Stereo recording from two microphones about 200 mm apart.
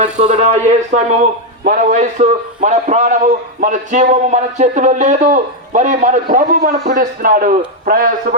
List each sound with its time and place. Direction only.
0.0 s speech: 35° right (ahead or behind)